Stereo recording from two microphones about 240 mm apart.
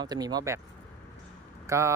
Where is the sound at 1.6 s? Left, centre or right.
Centre.